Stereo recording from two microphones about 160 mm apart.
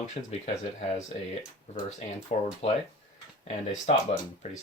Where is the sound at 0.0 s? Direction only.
45° left (ahead or behind).